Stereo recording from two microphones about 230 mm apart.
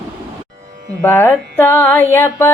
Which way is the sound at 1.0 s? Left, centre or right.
Centre.